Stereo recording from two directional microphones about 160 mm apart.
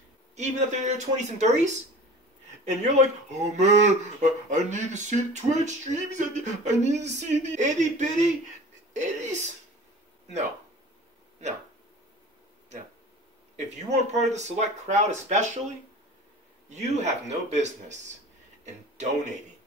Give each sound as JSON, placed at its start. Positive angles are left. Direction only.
{"t": 0.4, "sound": "speech", "side_deg": -50}
{"t": 13.6, "sound": "speech", "side_deg": -45}
{"t": 16.7, "sound": "speech", "side_deg": -45}